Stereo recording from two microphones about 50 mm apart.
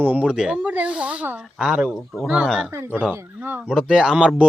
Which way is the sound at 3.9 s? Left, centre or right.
Centre.